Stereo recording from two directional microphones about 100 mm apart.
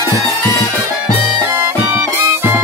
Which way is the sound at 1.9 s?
20° right (ahead or behind).